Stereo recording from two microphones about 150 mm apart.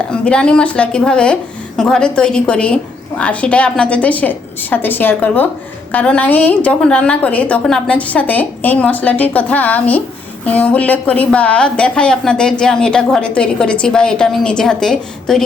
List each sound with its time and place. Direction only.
0.1 s a woman's voice: 5° left (ahead or behind)